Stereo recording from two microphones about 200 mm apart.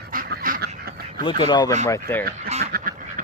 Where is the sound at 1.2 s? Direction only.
25° left (ahead or behind).